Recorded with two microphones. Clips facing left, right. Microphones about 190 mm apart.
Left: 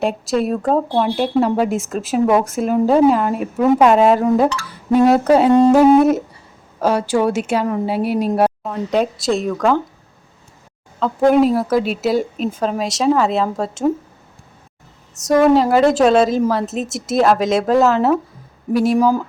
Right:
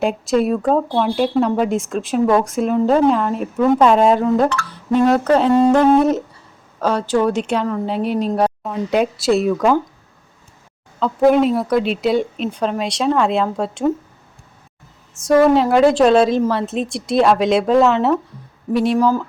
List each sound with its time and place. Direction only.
0.0 s speech: centre (ahead or behind)
8.6 s speech: 5° right (ahead or behind)
11.0 s speech: centre (ahead or behind)
15.4 s speech: centre (ahead or behind)
18.9 s speech: 15° left (ahead or behind)